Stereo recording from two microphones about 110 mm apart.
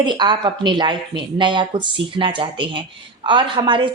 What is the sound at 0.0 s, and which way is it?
A woman's voice, 45° right (ahead or behind).